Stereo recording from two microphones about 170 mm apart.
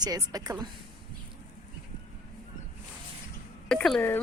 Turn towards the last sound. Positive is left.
turn(degrees=5)  # may be behind; listen again after turning